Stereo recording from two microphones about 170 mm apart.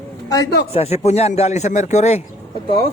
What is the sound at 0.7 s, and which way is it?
A man's voice, 40° left (ahead or behind).